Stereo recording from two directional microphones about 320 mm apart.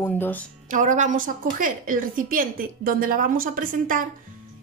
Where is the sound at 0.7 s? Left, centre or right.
Right.